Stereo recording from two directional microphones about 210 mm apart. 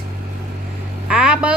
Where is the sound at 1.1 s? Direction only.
5° right (ahead or behind).